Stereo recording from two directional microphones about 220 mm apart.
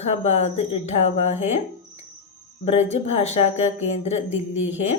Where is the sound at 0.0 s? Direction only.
30° left (ahead or behind).